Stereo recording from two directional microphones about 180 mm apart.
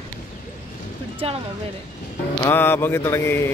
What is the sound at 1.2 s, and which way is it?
Speech, 35° right (ahead or behind).